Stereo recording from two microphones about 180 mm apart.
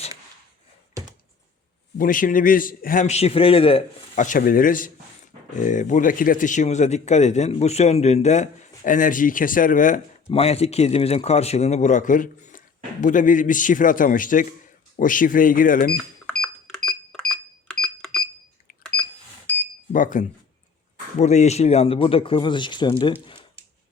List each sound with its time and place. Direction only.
2.0 s speech: 50° left (ahead or behind); by 3.8 s 30° left (ahead or behind)
4.1 s speech: 45° left (ahead or behind)
10.2 s speech: 35° left (ahead or behind); by 16.0 s 50° left (ahead or behind)
16.0 s cash register: 5° left (ahead or behind)
18.7 s a sound: 50° left (ahead or behind)
19.9 s speech: 45° left (ahead or behind); by 23.1 s 25° left (ahead or behind)
23.2 s a sound: 30° left (ahead or behind)